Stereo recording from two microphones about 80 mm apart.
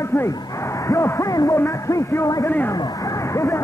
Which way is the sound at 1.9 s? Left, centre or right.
Left.